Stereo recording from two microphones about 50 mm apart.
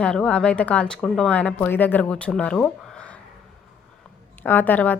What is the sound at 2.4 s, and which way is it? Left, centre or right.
Speech, left.